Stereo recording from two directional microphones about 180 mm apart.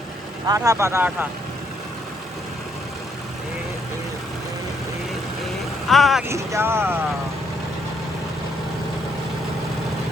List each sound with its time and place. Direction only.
0.4 s speech: 20° right (ahead or behind)
5.9 s speech: centre (ahead or behind)
6.2 s speech: 15° right (ahead or behind)